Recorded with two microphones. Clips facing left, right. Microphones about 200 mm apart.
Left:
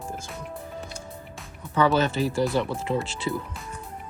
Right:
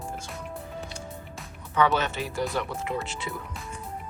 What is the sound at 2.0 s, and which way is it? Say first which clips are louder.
Speech: left 6 dB; 35° left (ahead or behind).